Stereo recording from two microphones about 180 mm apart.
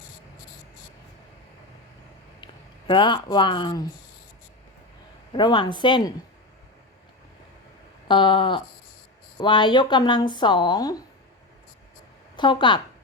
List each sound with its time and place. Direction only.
2.4 s speech: 25° left (ahead or behind)
5.3 s speech: 25° left (ahead or behind)
8.0 s speech: 25° left (ahead or behind)
12.4 s speech: 25° left (ahead or behind)